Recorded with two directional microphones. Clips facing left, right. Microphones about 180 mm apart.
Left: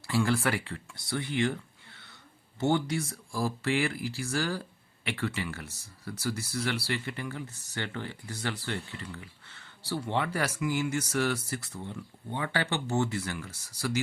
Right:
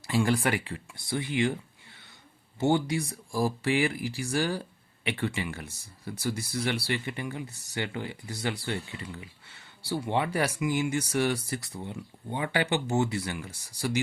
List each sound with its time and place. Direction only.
0.0 s speech: 15° right (ahead or behind)